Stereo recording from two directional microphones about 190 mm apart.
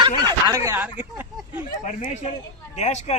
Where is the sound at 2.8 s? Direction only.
35° left (ahead or behind).